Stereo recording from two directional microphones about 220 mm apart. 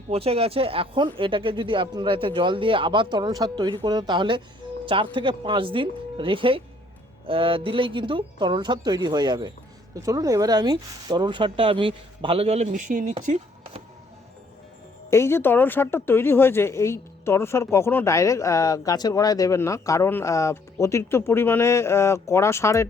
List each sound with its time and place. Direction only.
0.1 s speech: 25° right (ahead or behind)
15.1 s speech: 10° left (ahead or behind)